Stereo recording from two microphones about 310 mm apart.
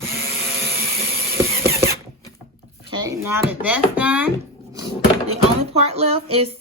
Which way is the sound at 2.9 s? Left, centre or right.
Centre.